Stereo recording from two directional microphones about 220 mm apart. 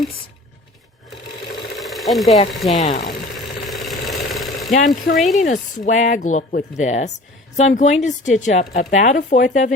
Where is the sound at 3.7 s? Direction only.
Centre (ahead or behind).